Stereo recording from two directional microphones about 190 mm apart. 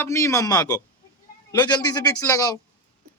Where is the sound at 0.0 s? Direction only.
15° left (ahead or behind).